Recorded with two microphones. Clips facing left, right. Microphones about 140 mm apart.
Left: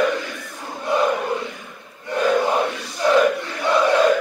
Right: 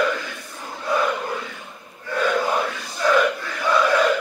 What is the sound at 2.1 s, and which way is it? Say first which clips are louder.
Battle cry: left 3 dB; 25° left (ahead or behind).